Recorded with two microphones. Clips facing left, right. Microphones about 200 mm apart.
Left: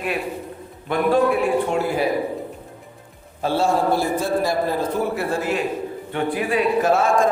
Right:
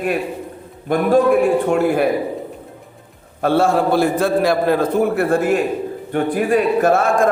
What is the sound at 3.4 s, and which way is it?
A man's voice, 60° right (ahead or behind).